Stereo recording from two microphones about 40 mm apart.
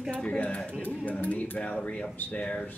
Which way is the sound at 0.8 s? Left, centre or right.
Left.